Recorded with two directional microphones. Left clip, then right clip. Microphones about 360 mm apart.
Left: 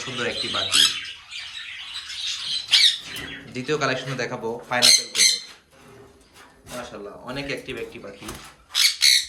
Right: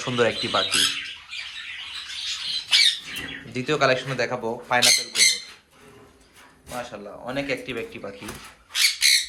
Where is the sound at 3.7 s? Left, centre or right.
Centre.